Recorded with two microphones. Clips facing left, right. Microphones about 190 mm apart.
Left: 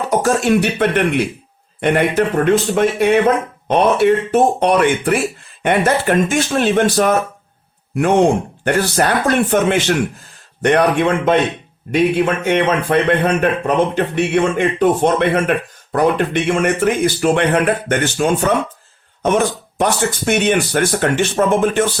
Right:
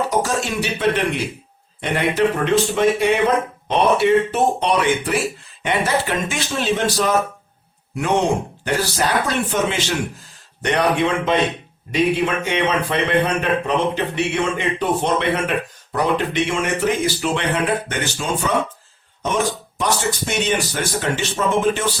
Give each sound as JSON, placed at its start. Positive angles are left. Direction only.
{"t": 0.1, "sound": "a man's voice", "side_deg": 55}
{"t": 8.6, "sound": "a man's voice", "side_deg": 55}
{"t": 19.8, "sound": "speech", "side_deg": 55}